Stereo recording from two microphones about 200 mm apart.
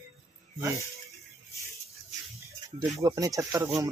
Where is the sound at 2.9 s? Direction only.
15° right (ahead or behind).